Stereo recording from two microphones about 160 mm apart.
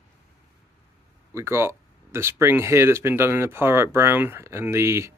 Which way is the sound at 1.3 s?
15° right (ahead or behind).